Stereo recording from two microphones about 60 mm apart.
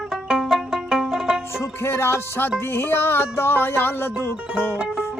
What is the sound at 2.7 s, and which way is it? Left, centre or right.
Speech, left.